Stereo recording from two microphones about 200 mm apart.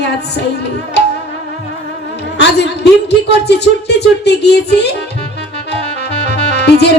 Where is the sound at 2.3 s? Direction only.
55° left (ahead or behind).